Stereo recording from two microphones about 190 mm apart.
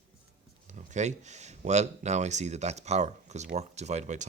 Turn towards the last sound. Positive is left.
turn(degrees=-40)  # may be behind; listen again after turning